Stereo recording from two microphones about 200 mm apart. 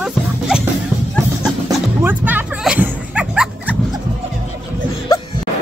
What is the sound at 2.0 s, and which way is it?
Music, 10° right (ahead or behind).